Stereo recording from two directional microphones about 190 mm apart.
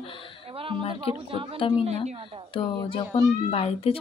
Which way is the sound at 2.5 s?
25° left (ahead or behind).